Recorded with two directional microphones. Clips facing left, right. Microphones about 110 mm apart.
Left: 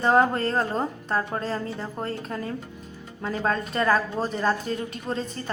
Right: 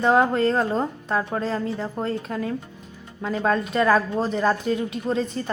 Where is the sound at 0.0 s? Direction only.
Centre (ahead or behind).